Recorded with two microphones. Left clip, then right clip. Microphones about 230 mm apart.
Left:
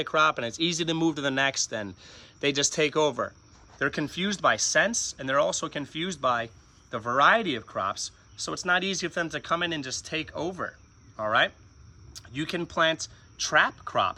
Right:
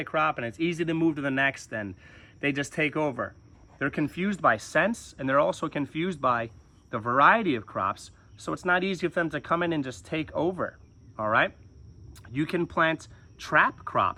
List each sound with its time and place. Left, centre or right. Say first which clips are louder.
0.0 s speech: left 3 dB; centre